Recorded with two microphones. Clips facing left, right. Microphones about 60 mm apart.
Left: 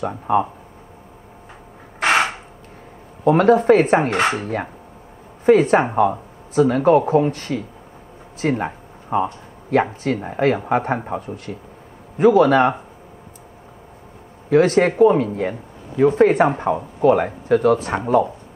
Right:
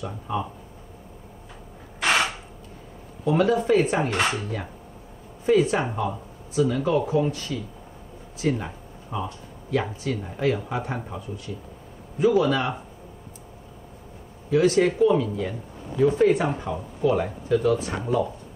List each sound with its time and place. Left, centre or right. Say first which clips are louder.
0.0 s speech: left 10 dB; left
2.0 s a sound: left 5 dB; left
3.3 s speech: left 7 dB; left
14.5 s speech: left 5 dB; left